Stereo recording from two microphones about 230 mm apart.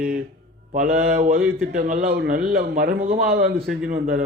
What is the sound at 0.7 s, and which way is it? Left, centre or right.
Speech, right.